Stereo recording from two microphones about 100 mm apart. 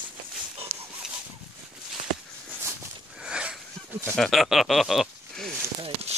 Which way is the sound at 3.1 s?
10° right (ahead or behind).